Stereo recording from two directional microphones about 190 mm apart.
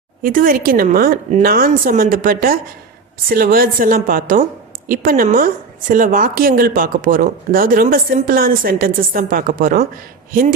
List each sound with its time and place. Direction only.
0.2 s a woman's voice: 45° right (ahead or behind)